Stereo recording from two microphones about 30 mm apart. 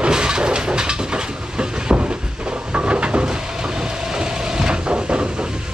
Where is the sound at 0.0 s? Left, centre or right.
Right.